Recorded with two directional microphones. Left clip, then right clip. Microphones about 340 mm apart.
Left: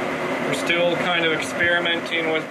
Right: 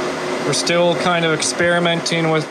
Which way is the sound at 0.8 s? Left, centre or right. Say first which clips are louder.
Right 5 dB; right.